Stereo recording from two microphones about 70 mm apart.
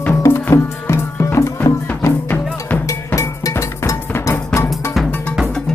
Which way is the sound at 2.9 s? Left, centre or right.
Left.